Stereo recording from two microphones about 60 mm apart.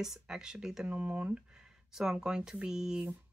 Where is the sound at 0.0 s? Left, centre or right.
Centre.